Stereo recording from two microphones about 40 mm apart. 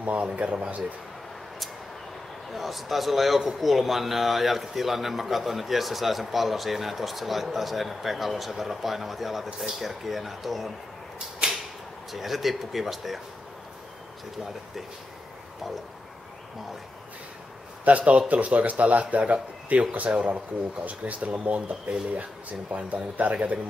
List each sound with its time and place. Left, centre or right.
0.0 s a man's voice: right
2.5 s a man's voice: centre
11.4 s a sound: right
12.1 s a man's voice: centre
17.8 s a man's voice: right